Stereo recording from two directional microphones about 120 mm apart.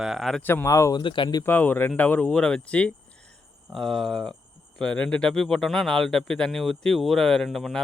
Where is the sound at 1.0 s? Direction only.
45° left (ahead or behind).